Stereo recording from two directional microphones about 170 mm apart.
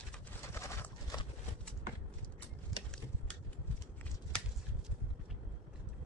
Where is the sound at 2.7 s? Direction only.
Centre (ahead or behind).